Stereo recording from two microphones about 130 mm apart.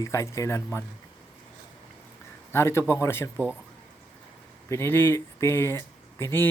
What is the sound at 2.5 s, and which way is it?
Speech, 20° left (ahead or behind).